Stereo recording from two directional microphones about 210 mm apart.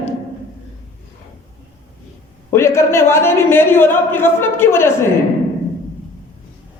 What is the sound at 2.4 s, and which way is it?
A man's voice, 10° left (ahead or behind).